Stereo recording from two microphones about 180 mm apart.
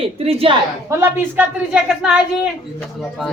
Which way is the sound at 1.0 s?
10° right (ahead or behind).